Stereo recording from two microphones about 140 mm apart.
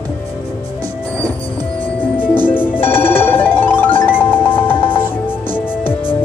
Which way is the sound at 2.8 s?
15° left (ahead or behind).